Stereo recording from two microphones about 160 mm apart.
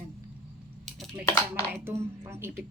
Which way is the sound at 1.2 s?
15° left (ahead or behind).